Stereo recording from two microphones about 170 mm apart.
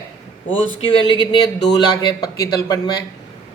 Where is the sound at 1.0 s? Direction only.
25° left (ahead or behind).